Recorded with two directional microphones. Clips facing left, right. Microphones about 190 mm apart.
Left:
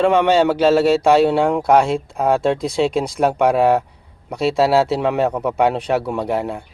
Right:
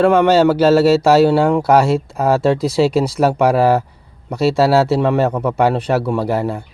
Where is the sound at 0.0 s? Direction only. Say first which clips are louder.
Right 3 dB; centre (ahead or behind).